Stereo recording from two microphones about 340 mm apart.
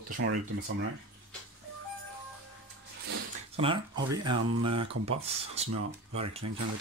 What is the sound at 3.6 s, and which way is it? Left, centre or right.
Speech, centre.